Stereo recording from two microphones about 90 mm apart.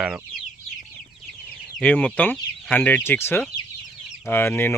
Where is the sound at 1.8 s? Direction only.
15° left (ahead or behind).